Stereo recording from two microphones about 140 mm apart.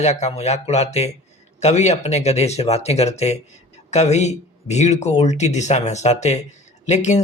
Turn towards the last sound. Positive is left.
turn(degrees=55)  # may be behind; listen again after turning